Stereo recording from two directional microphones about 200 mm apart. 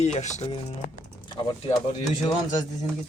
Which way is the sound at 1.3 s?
20° left (ahead or behind).